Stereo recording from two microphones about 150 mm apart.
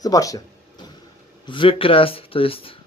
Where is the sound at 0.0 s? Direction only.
25° left (ahead or behind).